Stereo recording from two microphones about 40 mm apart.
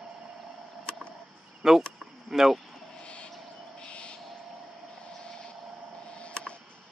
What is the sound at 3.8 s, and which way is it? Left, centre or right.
Bird, left.